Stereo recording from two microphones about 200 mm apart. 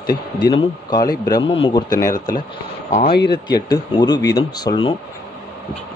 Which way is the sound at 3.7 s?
20° left (ahead or behind).